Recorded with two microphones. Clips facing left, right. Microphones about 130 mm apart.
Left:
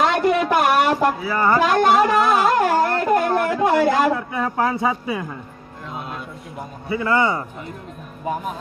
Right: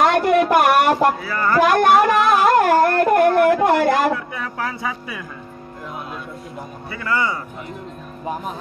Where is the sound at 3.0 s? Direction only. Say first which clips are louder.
Right 4 dB; 60° right (ahead or behind).